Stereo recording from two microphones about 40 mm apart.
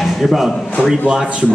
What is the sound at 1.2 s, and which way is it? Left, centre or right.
Speech, right.